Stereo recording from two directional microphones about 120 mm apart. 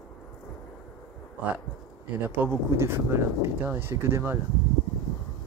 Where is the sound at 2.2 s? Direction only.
15° right (ahead or behind).